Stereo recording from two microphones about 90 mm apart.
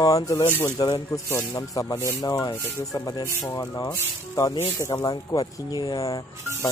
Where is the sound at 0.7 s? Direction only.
55° left (ahead or behind).